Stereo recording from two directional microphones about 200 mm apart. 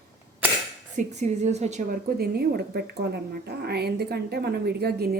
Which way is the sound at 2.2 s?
50° right (ahead or behind).